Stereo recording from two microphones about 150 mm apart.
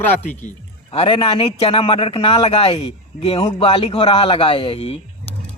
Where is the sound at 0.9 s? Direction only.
35° left (ahead or behind).